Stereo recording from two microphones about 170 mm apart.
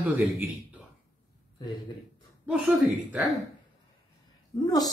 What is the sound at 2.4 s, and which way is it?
Speech, 10° right (ahead or behind).